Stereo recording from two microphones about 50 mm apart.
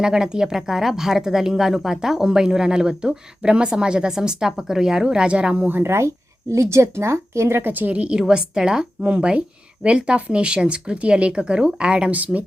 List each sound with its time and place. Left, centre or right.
0.0 s speech: centre
5.8 s speech: right
6.5 s speech: right
7.6 s speech: right
8.2 s speech: centre
12.2 s speech: right